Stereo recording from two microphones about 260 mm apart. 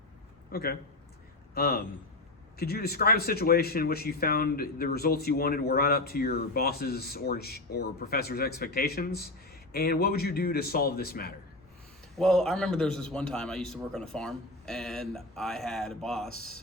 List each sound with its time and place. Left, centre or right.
0.5 s speech: left
12.1 s a man's voice: centre